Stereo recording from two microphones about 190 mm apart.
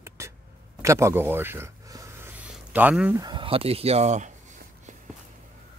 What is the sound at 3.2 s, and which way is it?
Speech, 25° right (ahead or behind).